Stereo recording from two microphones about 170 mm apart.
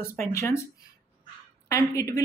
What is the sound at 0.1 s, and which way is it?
Speech, 15° left (ahead or behind).